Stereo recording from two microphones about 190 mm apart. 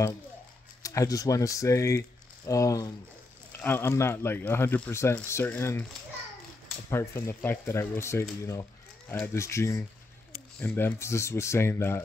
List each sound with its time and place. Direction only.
0.8 s speech: 20° left (ahead or behind)
6.9 s speech: 15° left (ahead or behind)